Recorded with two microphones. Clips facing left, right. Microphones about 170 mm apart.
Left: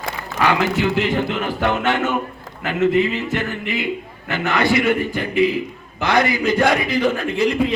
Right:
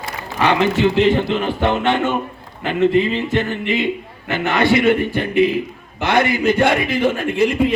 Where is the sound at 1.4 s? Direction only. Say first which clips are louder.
Right 2 dB; 20° right (ahead or behind).